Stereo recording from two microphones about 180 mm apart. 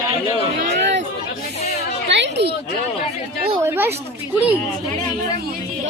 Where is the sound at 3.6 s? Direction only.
15° right (ahead or behind).